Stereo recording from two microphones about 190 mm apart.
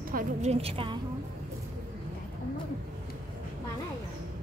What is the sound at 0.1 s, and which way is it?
Speech, 40° right (ahead or behind).